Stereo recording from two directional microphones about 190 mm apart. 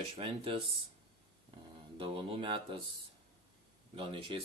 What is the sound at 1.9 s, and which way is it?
Speech, 25° right (ahead or behind).